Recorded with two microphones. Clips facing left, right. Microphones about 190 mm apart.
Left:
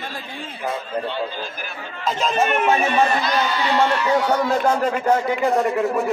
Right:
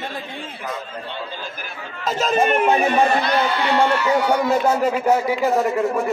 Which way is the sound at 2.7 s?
35° right (ahead or behind).